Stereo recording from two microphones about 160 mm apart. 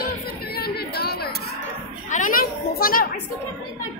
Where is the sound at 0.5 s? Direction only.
80° left.